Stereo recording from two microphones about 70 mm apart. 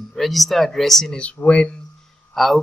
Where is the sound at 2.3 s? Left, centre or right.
Centre.